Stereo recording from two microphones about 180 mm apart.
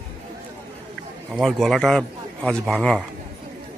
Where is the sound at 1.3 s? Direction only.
Centre (ahead or behind).